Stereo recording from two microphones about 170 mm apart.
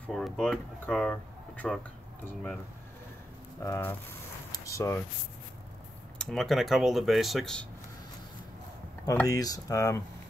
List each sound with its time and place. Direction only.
0.0 s speech: centre (ahead or behind)
3.6 s speech: 15° left (ahead or behind)
4.5 s a sound: 20° left (ahead or behind)
6.1 s speech: centre (ahead or behind)
9.0 s speech: 20° left (ahead or behind)